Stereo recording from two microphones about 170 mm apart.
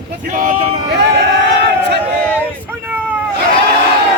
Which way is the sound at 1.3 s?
80° right.